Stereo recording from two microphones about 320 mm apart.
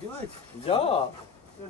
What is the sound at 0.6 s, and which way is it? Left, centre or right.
Speech, centre.